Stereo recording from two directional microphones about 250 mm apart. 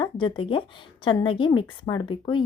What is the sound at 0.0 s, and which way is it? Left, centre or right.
Speech, centre.